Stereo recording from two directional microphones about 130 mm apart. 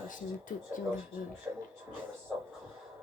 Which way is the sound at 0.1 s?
90° left.